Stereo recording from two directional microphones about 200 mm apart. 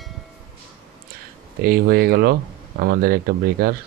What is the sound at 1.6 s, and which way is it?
Speech, 50° right (ahead or behind).